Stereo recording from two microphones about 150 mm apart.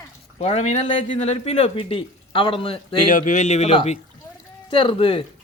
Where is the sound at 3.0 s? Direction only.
60° left (ahead or behind).